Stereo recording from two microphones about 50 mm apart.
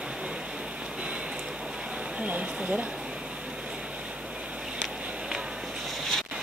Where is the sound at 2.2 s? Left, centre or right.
Right.